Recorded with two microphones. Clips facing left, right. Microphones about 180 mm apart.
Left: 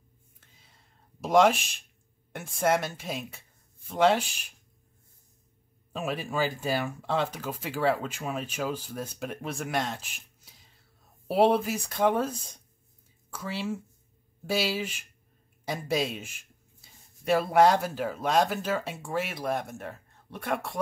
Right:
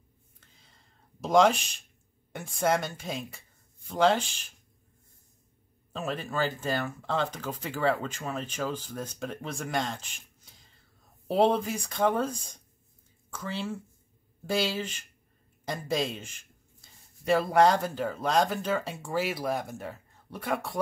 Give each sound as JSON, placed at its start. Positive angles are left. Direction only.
{"t": 0.4, "sound": "a sound", "side_deg": 5}
{"t": 2.3, "sound": "speech", "side_deg": 0}
{"t": 5.9, "sound": "speech", "side_deg": 10}